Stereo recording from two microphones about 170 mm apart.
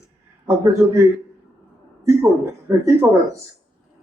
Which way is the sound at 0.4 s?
15° right (ahead or behind).